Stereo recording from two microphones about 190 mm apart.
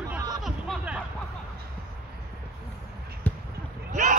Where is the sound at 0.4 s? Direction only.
5° right (ahead or behind).